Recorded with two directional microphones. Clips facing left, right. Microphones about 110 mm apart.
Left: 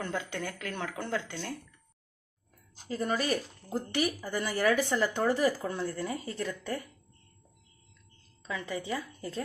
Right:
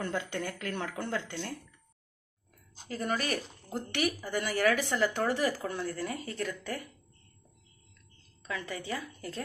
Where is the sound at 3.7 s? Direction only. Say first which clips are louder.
Left 1 dB; 30° left (ahead or behind).